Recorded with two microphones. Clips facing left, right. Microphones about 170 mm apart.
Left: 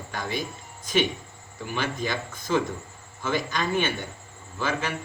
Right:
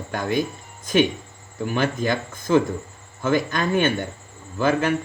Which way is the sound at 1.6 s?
50° right (ahead or behind).